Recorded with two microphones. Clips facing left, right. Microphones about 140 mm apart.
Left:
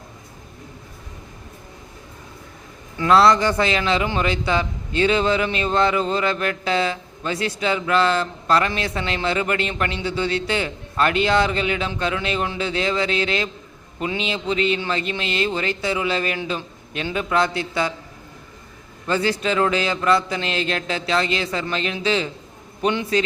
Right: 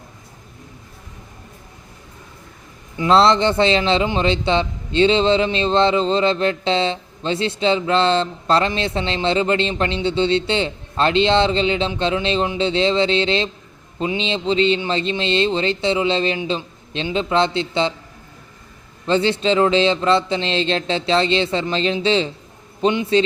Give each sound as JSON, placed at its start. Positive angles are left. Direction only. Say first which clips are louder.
{"t": 3.0, "sound": "a man's voice", "louder": "right 1 dB", "side_deg": -25}
{"t": 19.0, "sound": "a man's voice", "louder": "right 4 dB", "side_deg": -25}